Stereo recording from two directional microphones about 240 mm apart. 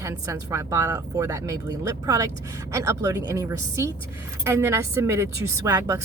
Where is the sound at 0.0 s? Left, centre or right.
Centre.